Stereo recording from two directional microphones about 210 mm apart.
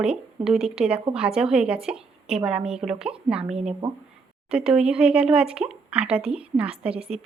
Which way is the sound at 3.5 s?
30° right (ahead or behind).